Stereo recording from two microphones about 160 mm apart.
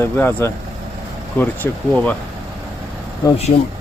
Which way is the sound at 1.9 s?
10° left (ahead or behind).